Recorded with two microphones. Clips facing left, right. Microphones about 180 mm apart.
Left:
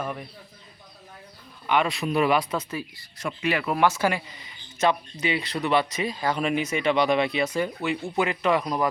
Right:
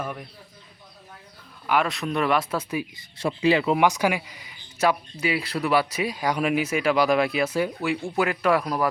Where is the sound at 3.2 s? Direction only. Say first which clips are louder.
Right 6 dB; 30° right (ahead or behind).